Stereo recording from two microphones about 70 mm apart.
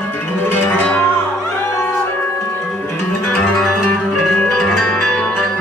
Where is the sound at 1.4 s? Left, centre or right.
Left.